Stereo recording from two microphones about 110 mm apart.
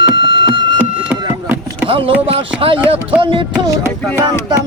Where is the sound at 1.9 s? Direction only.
55° right (ahead or behind).